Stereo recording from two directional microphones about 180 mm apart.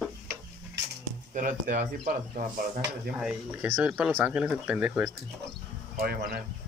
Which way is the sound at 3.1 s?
5° right (ahead or behind).